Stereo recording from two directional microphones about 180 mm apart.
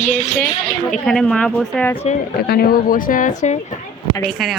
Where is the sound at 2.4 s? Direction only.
55° left (ahead or behind).